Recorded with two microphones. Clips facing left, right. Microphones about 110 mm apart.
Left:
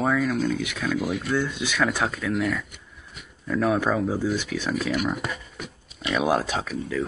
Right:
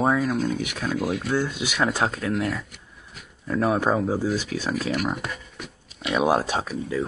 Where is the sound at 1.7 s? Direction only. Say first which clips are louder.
Right 1 dB; 30° right (ahead or behind).